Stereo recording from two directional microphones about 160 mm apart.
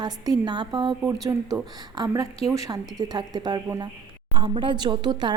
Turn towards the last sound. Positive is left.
turn(degrees=-30)  # may be behind; listen again after turning